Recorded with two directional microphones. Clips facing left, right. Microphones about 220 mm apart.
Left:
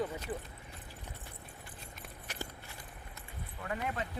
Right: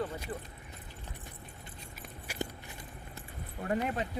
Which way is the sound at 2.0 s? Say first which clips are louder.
Right 6 dB; 10° right (ahead or behind).